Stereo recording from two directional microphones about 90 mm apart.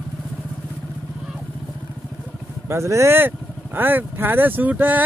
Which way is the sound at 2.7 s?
30° right (ahead or behind).